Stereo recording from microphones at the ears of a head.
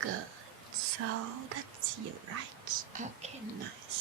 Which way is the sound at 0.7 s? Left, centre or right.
Right.